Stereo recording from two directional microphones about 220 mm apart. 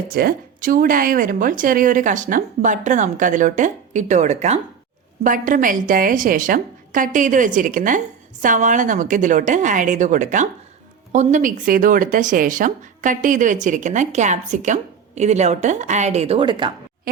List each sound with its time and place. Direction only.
0.1 s speech: 45° right (ahead or behind); by 16.7 s 20° right (ahead or behind)